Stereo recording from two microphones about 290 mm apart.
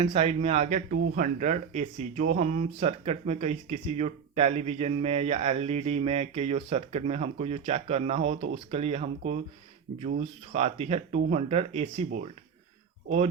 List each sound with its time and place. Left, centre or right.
0.0 s speech: right